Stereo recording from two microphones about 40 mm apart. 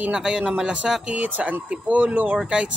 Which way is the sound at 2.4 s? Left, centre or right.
Right.